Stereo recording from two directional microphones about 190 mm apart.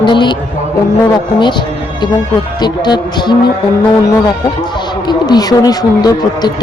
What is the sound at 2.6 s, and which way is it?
Speech, 20° left (ahead or behind).